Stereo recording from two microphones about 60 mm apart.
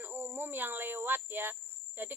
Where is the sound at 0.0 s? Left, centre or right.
Right.